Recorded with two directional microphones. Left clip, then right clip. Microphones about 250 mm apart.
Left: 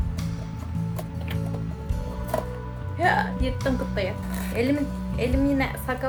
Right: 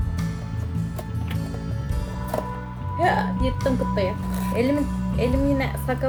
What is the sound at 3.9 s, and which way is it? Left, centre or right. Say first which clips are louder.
A woman's voice: right 3 dB; centre.